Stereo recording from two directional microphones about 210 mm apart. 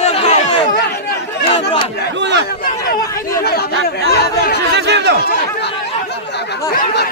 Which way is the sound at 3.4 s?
50° left (ahead or behind).